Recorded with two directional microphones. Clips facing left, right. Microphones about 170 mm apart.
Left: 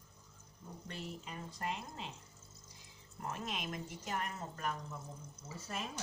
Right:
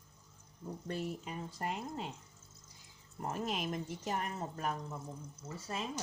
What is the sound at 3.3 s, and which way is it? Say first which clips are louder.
Speech: right 5 dB; 35° right (ahead or behind).